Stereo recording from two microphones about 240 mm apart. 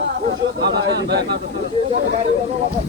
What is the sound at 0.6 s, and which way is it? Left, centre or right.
Speech, right.